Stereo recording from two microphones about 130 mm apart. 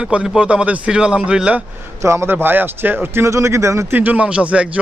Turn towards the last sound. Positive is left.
turn(degrees=-10)  # may be behind; listen again after turning